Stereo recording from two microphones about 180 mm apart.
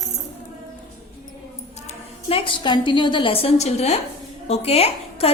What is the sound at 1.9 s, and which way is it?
A woman's voice, 35° left (ahead or behind).